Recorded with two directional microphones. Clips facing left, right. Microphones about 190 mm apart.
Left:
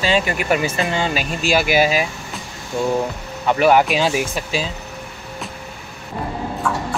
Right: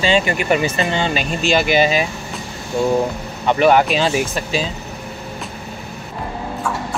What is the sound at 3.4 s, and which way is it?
Speech, 5° left (ahead or behind).